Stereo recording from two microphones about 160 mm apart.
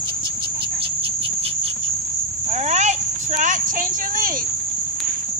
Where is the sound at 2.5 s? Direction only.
45° right (ahead or behind).